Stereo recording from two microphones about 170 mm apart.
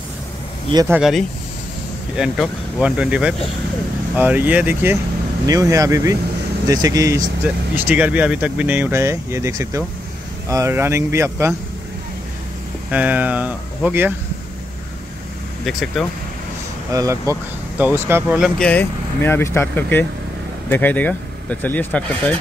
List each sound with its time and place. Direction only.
0.8 s speech: 5° right (ahead or behind); by 7.2 s 20° right (ahead or behind)
7.4 s speech: 10° right (ahead or behind)
12.9 s speech: 10° right (ahead or behind)
15.6 s speech: centre (ahead or behind)
16.9 s speech: 20° right (ahead or behind)
18.4 s speech: 5° left (ahead or behind)